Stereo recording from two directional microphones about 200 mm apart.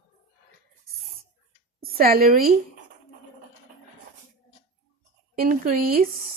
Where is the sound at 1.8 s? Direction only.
50° right (ahead or behind).